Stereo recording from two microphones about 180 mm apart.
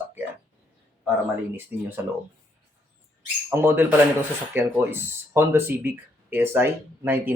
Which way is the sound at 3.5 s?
10° right (ahead or behind).